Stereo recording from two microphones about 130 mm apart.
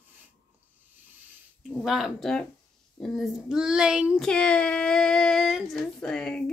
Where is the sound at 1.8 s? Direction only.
5° right (ahead or behind).